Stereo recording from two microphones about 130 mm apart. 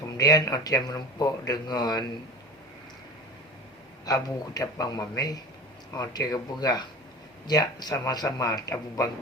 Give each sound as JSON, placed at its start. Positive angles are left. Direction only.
{"t": 0.2, "sound": "speech", "side_deg": 30}
{"t": 4.0, "sound": "speech", "side_deg": 30}